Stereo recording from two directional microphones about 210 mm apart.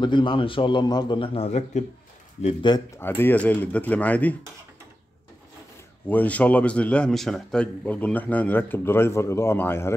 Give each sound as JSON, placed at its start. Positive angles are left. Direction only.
{"t": 0.0, "sound": "a man's voice", "side_deg": 20}
{"t": 2.4, "sound": "a man's voice", "side_deg": 20}
{"t": 3.0, "sound": "speech", "side_deg": 10}
{"t": 6.0, "sound": "speech", "side_deg": 10}